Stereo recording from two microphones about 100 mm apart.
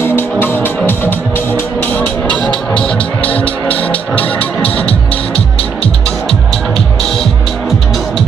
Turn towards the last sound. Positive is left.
turn(degrees=5)  # may be behind; listen again after turning